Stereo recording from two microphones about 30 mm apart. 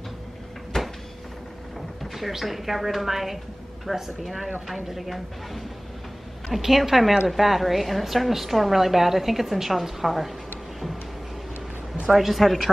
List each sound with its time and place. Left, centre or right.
0.7 s cupboard open or close: centre
2.1 s a woman's voice: centre
12.1 s a woman's voice: centre